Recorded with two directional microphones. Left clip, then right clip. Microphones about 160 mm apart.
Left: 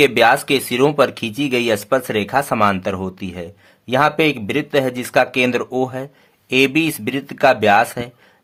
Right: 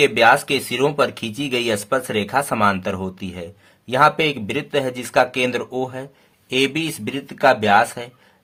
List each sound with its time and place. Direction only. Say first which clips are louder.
0.0 s speech: left 1 dB; 35° left (ahead or behind)